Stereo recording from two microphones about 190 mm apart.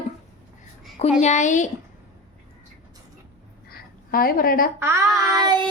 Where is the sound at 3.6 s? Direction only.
50° left (ahead or behind).